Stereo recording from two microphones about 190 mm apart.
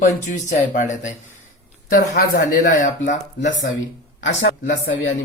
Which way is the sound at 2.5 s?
45° left (ahead or behind).